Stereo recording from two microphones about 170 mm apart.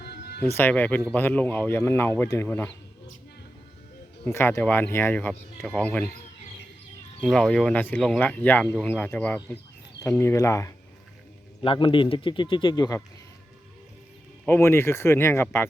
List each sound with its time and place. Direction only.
0.0 s music: 70° left (ahead or behind)
0.5 s speech: 10° left (ahead or behind)
4.3 s speech: 15° left (ahead or behind)
7.2 s speech: 5° left (ahead or behind)
11.6 s a man's voice: 30° left (ahead or behind)
14.4 s speech: 15° left (ahead or behind)